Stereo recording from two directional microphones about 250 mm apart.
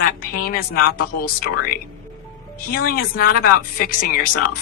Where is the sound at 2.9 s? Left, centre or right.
Left.